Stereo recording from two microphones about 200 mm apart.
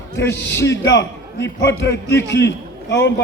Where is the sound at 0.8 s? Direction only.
60° left (ahead or behind).